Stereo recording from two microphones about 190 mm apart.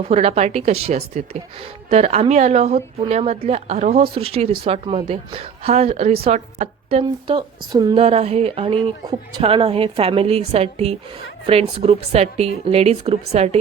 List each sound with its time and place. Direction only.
0.1 s a woman's voice: 35° right (ahead or behind)
8.0 s a woman's voice: 35° right (ahead or behind)